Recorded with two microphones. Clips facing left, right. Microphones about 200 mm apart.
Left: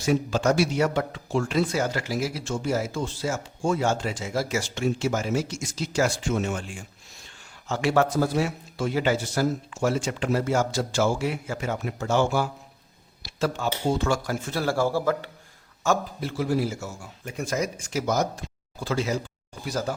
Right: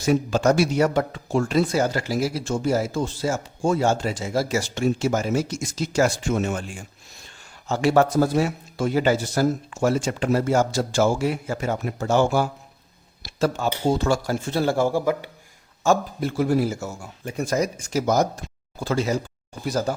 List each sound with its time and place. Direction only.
0.0 s speech: 45° right (ahead or behind)
7.7 s speech: 40° right (ahead or behind); by 15.3 s 15° right (ahead or behind)
16.2 s speech: 50° right (ahead or behind)
17.2 s speech: 35° right (ahead or behind)